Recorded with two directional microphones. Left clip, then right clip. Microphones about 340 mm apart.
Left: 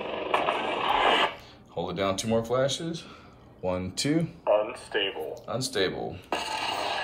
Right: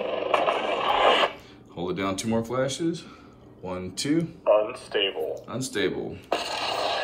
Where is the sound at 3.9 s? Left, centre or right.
Centre.